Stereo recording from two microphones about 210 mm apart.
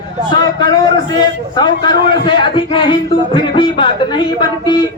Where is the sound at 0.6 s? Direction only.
20° left (ahead or behind).